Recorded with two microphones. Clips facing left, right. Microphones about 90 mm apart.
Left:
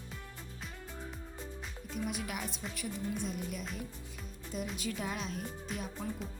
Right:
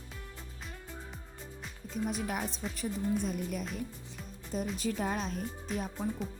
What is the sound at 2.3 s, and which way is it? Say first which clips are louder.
Speech: right 4 dB; 35° right (ahead or behind).